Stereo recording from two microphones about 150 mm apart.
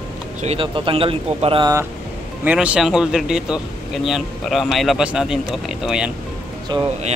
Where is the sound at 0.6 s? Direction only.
35° right (ahead or behind).